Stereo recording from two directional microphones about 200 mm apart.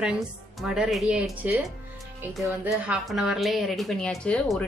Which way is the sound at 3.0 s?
Centre (ahead or behind).